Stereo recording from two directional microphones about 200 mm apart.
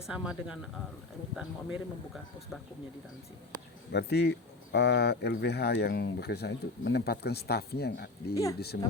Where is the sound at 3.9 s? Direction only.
55° left (ahead or behind).